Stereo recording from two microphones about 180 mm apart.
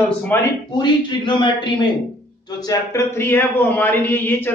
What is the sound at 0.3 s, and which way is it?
Speech, 10° left (ahead or behind).